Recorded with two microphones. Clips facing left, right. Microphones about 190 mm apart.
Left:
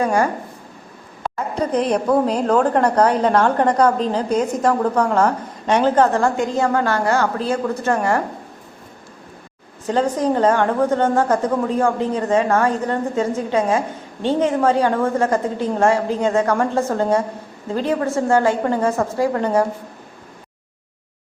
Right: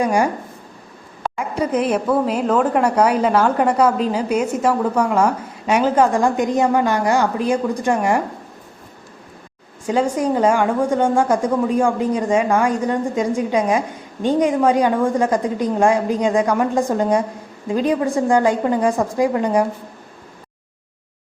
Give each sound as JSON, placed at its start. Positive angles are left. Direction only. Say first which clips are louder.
{"t": 0.0, "sound": "a woman's voice", "louder": "even", "side_deg": -15}
{"t": 1.4, "sound": "a woman's voice", "louder": "even", "side_deg": -10}
{"t": 9.8, "sound": "a woman's voice", "louder": "even", "side_deg": -10}